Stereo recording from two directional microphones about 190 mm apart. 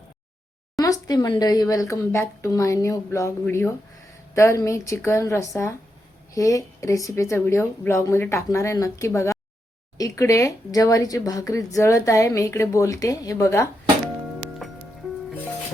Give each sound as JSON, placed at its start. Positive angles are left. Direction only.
{"t": 0.8, "sound": "speech", "side_deg": 20}